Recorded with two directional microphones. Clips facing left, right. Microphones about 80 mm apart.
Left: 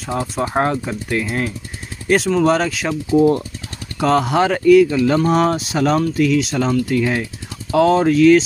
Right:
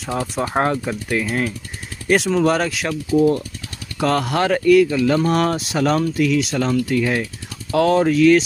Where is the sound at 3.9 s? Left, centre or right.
Centre.